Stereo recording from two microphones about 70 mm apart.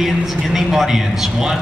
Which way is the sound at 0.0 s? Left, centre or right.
Centre.